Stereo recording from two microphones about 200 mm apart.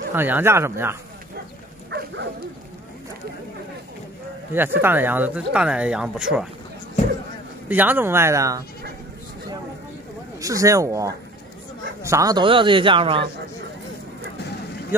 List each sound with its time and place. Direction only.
0.1 s speech: 10° right (ahead or behind)
1.9 s speech: 60° right (ahead or behind)
4.6 s speech: 10° right (ahead or behind)
7.6 s speech: 10° right (ahead or behind)
10.4 s a man's voice: 15° right (ahead or behind)